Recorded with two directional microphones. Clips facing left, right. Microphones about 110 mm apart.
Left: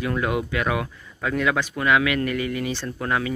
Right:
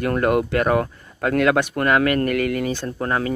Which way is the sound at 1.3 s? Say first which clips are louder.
Right 5 dB; 60° right (ahead or behind).